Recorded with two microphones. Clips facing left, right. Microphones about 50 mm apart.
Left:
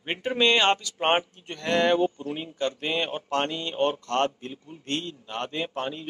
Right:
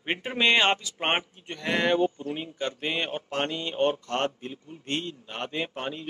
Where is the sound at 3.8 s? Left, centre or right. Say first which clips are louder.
Even; left.